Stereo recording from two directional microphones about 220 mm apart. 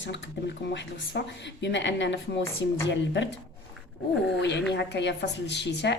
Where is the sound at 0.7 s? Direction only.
55° left (ahead or behind).